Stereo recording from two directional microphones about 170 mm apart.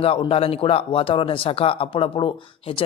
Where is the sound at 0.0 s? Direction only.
35° left (ahead or behind).